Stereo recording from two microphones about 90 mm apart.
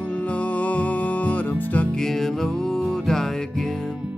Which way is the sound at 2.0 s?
5° left (ahead or behind).